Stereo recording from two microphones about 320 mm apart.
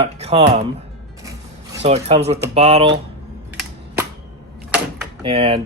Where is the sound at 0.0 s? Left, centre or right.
Centre.